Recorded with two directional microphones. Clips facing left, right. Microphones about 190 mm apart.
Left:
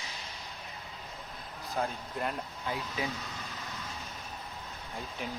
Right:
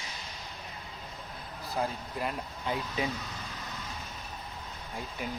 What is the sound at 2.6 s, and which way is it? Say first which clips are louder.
Speech: right 3 dB; 20° right (ahead or behind).